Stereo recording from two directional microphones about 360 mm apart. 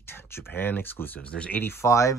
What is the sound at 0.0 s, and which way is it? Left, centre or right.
Speech, centre.